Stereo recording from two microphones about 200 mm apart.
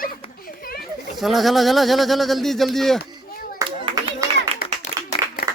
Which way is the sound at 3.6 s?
20° right (ahead or behind).